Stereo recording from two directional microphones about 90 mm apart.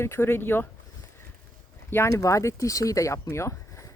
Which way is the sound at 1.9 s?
35° left (ahead or behind).